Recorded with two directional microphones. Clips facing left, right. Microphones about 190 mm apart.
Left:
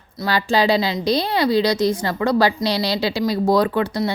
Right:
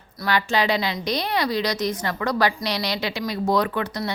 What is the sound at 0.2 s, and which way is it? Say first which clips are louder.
A woman's voice: left 4 dB; 30° left (ahead or behind).